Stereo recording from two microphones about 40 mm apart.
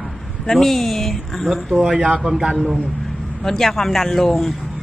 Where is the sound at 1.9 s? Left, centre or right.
Centre.